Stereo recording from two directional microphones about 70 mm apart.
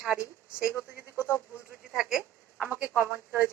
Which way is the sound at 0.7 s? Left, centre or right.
Right.